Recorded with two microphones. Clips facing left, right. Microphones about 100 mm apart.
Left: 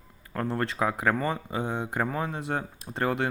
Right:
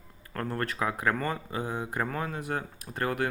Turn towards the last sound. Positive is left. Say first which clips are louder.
# left 2 dB
turn(degrees=25)  # may be behind; listen again after turning